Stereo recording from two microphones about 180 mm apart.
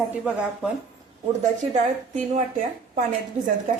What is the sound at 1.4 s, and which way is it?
A woman's voice, 40° right (ahead or behind).